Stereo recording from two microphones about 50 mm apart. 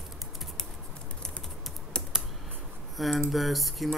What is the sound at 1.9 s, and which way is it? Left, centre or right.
Typing, centre.